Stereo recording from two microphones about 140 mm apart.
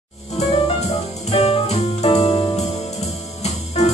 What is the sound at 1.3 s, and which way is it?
Music, 45° left (ahead or behind).